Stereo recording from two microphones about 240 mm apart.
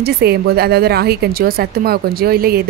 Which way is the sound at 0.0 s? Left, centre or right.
Right.